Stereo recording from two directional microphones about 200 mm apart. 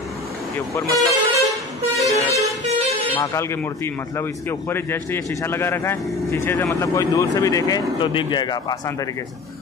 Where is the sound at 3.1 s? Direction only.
15° left (ahead or behind).